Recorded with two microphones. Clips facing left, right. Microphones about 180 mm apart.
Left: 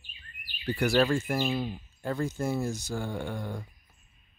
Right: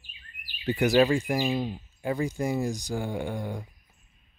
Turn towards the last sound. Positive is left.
turn(degrees=-15)  # may be behind; listen again after turning